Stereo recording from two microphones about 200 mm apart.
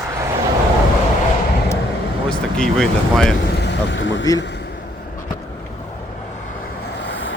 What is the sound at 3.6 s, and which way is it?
Vehicle, 60° left (ahead or behind).